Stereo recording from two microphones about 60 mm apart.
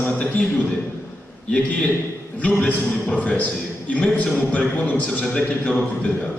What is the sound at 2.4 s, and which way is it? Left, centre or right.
A man's voice, left.